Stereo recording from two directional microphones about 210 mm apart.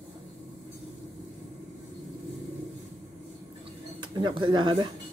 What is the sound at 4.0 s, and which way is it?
Speech, 20° right (ahead or behind).